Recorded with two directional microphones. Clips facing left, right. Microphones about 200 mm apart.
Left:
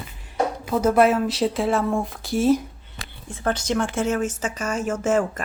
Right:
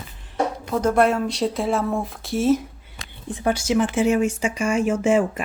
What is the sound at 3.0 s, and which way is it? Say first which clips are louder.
A woman's voice: right 5 dB; 15° right (ahead or behind).